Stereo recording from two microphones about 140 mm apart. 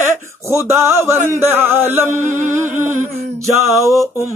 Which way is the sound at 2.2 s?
65° right (ahead or behind).